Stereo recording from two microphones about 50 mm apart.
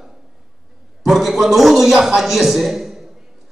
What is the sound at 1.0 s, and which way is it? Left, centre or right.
A man's voice, centre.